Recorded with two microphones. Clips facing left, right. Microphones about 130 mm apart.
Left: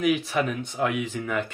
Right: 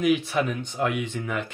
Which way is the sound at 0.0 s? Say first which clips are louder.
Right 1 dB; centre (ahead or behind).